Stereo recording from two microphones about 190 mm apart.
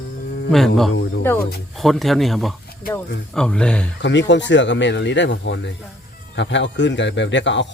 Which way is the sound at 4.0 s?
70° left (ahead or behind).